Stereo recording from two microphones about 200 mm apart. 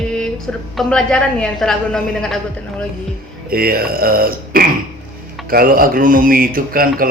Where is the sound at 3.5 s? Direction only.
50° right (ahead or behind).